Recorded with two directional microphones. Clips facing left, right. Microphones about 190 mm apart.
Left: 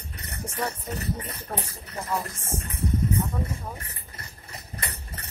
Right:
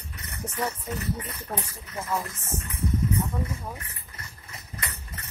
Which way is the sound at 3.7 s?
35° left (ahead or behind).